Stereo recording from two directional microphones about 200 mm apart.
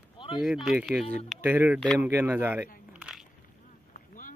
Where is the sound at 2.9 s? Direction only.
5° right (ahead or behind).